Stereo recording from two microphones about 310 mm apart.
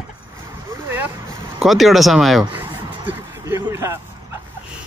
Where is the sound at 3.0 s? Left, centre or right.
Centre.